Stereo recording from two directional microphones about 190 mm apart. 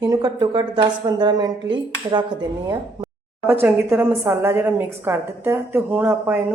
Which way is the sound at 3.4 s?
10° right (ahead or behind).